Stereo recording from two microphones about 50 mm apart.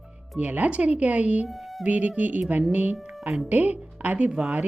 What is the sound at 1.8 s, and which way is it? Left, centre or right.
Speech, right.